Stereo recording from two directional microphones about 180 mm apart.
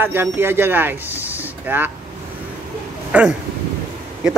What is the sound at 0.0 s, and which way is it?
Speech, 10° right (ahead or behind).